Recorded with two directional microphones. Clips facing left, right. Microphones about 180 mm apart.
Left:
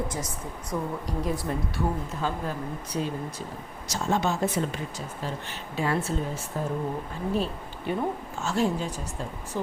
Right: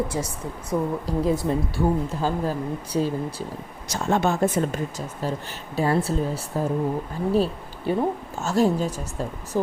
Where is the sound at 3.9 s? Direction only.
60° right (ahead or behind).